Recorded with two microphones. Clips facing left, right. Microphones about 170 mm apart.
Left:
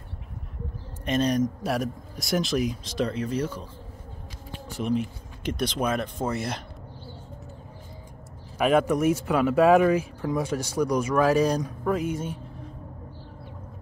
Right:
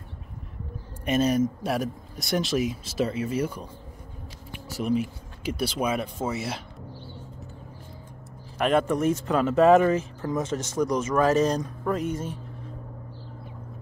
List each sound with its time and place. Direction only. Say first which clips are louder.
1.0 s speech: right 1 dB; 5° right (ahead or behind)
4.8 s speech: right 1 dB; 5° right (ahead or behind)
8.5 s speech: left 1 dB; 5° left (ahead or behind)